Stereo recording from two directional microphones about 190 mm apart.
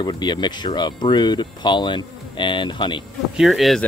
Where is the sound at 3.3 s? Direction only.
Centre (ahead or behind).